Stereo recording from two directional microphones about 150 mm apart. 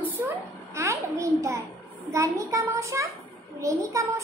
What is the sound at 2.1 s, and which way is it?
A child's voice, 20° right (ahead or behind).